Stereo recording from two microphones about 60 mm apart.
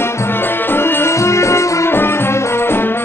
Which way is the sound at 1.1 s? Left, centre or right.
Left.